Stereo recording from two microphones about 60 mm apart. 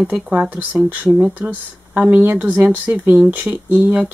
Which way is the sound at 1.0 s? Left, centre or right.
Centre.